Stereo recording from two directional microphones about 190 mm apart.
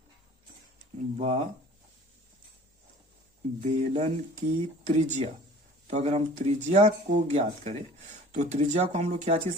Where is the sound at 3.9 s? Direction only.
35° right (ahead or behind).